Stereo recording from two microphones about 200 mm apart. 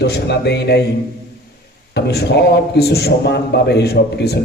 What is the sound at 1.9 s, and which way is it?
A man's voice, 55° left (ahead or behind).